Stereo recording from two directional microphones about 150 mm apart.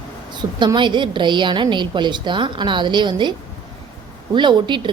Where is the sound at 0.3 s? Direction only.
30° right (ahead or behind).